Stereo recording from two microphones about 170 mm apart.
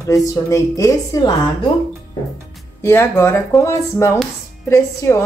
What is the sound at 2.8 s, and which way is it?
Speech, 15° left (ahead or behind).